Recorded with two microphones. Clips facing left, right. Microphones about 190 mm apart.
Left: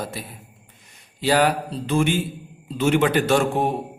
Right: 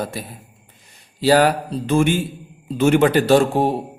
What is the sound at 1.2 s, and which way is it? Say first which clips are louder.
A man's voice: right 4 dB; 40° right (ahead or behind).